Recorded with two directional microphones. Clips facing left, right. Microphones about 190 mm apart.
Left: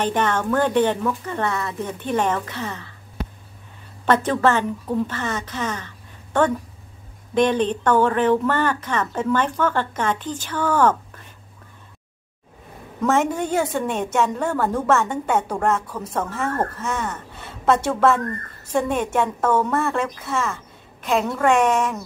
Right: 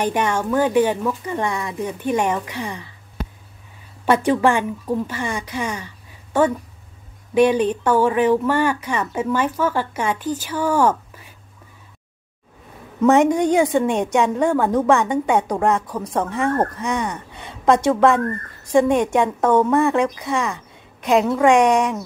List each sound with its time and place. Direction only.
0.0 s speech: 10° right (ahead or behind)
4.0 s a woman's voice: 10° right (ahead or behind)
13.0 s speech: 15° right (ahead or behind)